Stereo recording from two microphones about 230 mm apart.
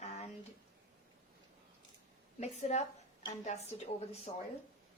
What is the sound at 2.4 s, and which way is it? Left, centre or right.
Speech, left.